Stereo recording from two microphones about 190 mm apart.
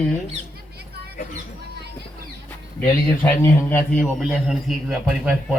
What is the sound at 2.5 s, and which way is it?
A man's voice, 15° left (ahead or behind).